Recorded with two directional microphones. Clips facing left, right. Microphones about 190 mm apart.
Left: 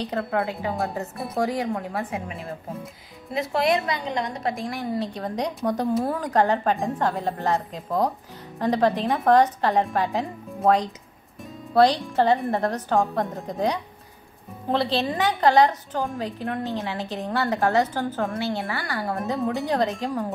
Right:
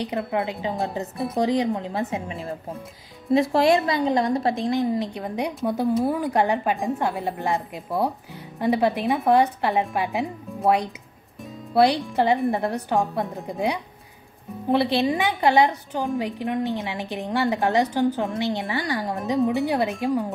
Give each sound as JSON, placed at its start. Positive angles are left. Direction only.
{"t": 0.0, "sound": "a woman's voice", "side_deg": -15}
{"t": 1.1, "sound": "speech", "side_deg": 0}
{"t": 1.4, "sound": "a woman's voice", "side_deg": -20}
{"t": 3.3, "sound": "a woman's voice", "side_deg": -30}